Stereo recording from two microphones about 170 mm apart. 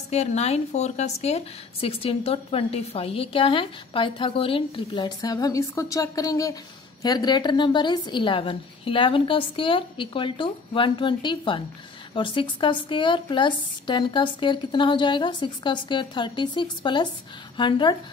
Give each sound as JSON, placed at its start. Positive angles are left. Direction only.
{"t": 0.1, "sound": "a woman's voice", "side_deg": 40}